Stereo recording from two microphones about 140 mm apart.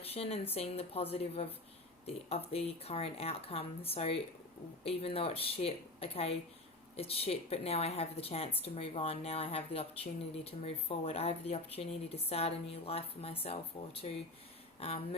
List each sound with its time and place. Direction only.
0.1 s speech: 45° left (ahead or behind)